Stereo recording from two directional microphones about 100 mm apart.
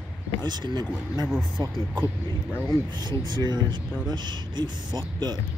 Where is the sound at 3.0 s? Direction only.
50° right (ahead or behind).